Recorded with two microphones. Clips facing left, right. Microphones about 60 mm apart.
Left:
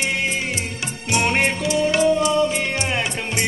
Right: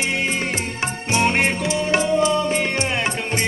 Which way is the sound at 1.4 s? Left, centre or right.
Right.